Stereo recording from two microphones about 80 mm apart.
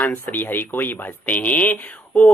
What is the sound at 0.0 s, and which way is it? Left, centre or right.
Speech, left.